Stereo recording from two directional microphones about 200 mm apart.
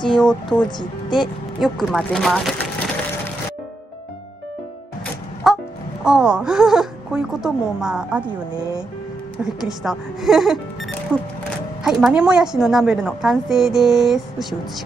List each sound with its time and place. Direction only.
0.2 s a woman's voice: 5° left (ahead or behind)
0.7 s a woman's voice: 20° left (ahead or behind)
1.6 s speech: centre (ahead or behind)
5.4 s music: centre (ahead or behind)
6.0 s a woman's voice: 5° right (ahead or behind)
8.5 s speech: 20° right (ahead or behind)
9.4 s a woman's voice: centre (ahead or behind)